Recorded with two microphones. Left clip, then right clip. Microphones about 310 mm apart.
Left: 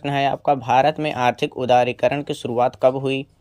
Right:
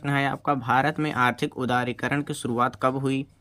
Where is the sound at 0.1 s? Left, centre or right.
Right.